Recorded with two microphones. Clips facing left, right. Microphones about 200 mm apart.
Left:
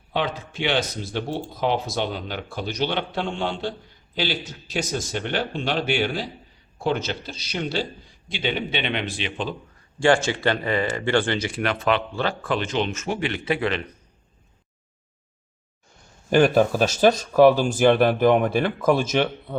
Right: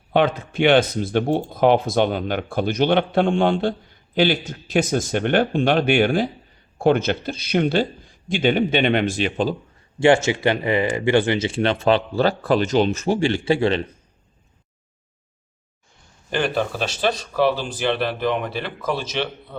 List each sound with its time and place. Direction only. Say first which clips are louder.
0.1 s a man's voice: right 7 dB; 55° right (ahead or behind)
10.0 s speech: right 3 dB; 20° right (ahead or behind)
16.3 s speech: left 6 dB; 45° left (ahead or behind)